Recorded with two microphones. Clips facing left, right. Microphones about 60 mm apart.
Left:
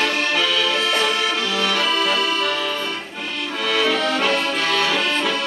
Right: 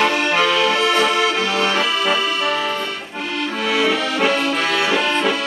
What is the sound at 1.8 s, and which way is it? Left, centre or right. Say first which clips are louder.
Accordion: right 1 dB; centre.